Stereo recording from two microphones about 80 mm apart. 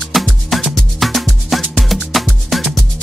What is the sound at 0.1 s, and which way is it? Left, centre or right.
Music, centre.